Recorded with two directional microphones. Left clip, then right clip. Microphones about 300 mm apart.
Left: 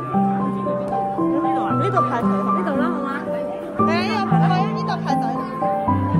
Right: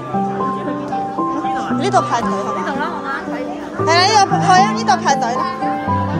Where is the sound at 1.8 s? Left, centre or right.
Centre.